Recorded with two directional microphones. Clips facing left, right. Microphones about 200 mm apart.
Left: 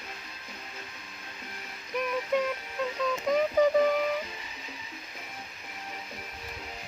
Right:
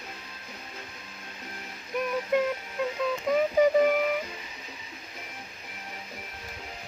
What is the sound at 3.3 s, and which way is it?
Synthetic singing, 10° right (ahead or behind).